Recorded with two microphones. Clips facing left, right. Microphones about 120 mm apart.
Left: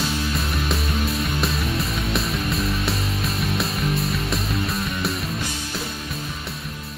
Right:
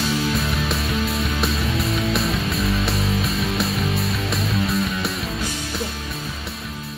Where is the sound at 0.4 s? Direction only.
Centre (ahead or behind).